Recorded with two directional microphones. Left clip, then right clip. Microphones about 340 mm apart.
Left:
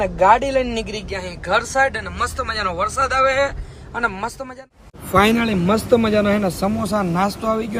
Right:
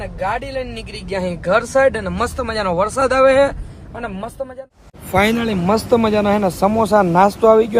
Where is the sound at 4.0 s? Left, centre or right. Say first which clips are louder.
Left 4 dB; centre.